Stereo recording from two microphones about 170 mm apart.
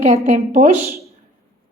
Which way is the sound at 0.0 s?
35° right (ahead or behind).